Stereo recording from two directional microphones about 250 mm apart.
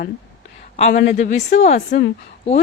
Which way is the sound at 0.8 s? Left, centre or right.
Left.